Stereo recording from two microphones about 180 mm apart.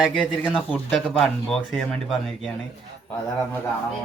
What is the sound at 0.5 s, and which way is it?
Speech, 5° left (ahead or behind).